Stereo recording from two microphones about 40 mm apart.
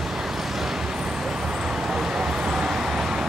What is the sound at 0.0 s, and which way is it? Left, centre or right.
Vehicle, centre.